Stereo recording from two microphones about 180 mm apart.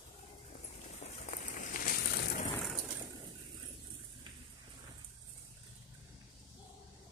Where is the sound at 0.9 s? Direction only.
40° left (ahead or behind); by 2.4 s 60° left (ahead or behind).